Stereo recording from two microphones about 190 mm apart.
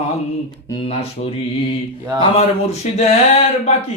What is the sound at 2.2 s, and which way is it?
Speech, 35° left (ahead or behind).